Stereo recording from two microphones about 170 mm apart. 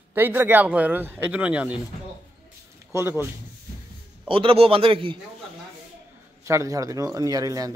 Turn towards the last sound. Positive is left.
turn(degrees=-20)  # may be behind; listen again after turning